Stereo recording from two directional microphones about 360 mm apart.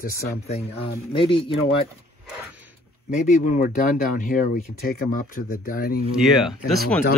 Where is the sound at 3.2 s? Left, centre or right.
Left.